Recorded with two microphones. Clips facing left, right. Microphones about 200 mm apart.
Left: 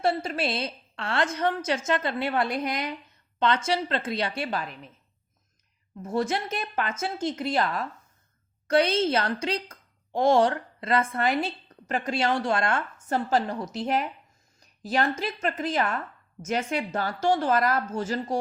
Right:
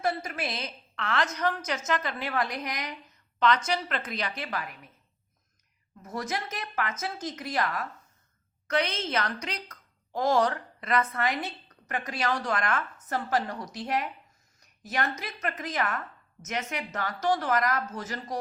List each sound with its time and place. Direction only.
0.0 s a woman's voice: 30° left (ahead or behind)
6.0 s a woman's voice: 30° left (ahead or behind)